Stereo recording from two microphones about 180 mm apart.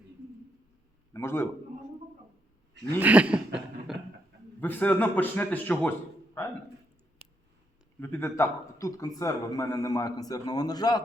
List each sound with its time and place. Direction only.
1.1 s a man's voice: 15° left (ahead or behind)
3.0 s cough: 10° right (ahead or behind)
4.6 s a man's voice: 10° left (ahead or behind)
7.9 s speech: 10° left (ahead or behind)